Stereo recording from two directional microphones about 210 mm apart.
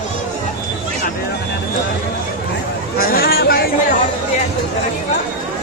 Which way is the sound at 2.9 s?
45° left (ahead or behind).